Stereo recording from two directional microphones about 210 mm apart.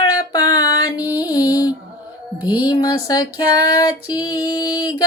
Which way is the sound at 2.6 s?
15° left (ahead or behind).